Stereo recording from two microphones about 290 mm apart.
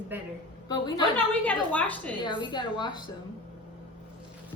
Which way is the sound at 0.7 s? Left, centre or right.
Centre.